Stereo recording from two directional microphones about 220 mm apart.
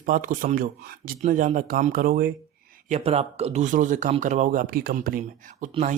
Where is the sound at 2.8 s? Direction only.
30° right (ahead or behind).